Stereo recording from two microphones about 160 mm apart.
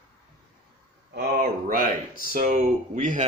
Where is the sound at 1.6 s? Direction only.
60° right (ahead or behind).